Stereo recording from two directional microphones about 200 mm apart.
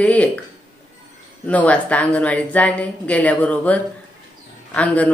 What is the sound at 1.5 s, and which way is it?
A woman's voice, 5° left (ahead or behind).